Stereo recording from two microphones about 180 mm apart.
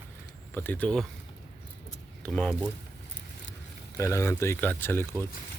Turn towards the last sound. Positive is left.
turn(degrees=10)  # may be behind; listen again after turning